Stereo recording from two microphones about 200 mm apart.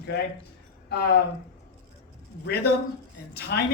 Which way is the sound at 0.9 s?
55° left (ahead or behind).